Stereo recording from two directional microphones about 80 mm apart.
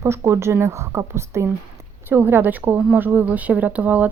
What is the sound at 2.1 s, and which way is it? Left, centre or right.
Speech, right.